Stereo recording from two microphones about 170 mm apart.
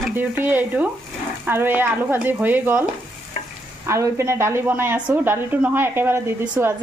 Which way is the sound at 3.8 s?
15° right (ahead or behind).